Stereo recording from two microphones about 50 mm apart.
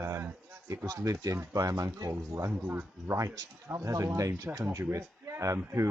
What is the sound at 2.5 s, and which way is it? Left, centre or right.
Speech, right.